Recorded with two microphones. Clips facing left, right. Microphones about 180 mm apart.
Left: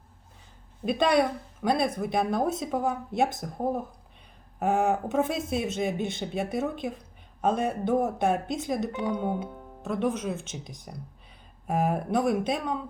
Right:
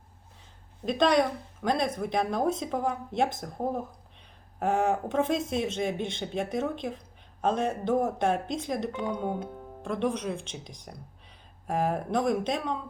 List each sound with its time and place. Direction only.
0.9 s speech: 5° left (ahead or behind)